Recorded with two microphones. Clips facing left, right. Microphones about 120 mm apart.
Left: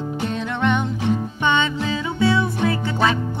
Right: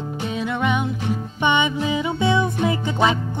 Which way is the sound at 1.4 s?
15° right (ahead or behind).